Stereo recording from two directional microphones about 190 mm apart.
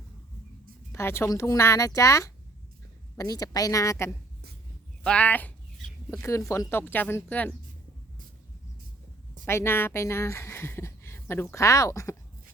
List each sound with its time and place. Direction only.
0.9 s speech: 15° left (ahead or behind)
9.5 s speech: 15° left (ahead or behind)